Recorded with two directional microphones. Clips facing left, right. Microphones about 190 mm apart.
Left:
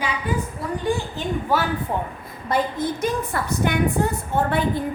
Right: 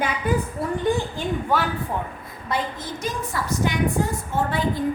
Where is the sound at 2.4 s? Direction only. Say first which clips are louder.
Left 5 dB; 55° left (ahead or behind).